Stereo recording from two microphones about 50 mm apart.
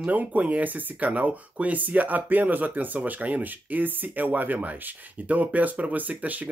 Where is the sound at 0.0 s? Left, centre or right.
Right.